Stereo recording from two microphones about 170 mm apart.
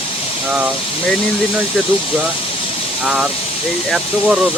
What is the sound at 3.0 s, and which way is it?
Speech, 5° right (ahead or behind).